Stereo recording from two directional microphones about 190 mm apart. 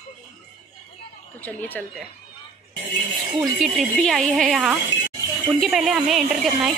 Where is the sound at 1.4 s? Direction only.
10° left (ahead or behind).